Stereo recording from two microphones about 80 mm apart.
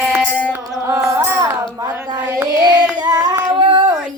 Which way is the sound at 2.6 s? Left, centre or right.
Right.